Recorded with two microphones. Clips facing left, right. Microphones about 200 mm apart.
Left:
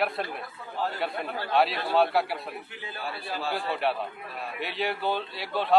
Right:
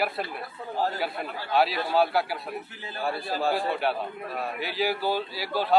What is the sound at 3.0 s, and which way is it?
Speech, 45° right (ahead or behind).